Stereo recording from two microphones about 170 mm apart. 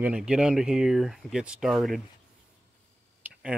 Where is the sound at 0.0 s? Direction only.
5° right (ahead or behind).